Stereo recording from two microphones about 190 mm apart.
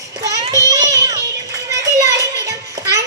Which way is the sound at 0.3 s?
20° right (ahead or behind).